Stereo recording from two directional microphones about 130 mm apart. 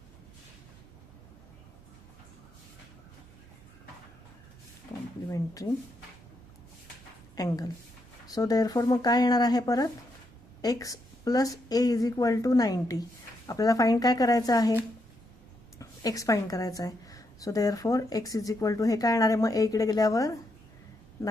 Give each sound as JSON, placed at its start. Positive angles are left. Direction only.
{"t": 7.3, "sound": "a woman's voice", "side_deg": 30}
{"t": 15.8, "sound": "a woman's voice", "side_deg": 25}